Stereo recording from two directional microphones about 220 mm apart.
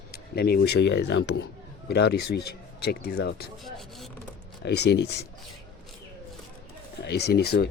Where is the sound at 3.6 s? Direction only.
Centre (ahead or behind).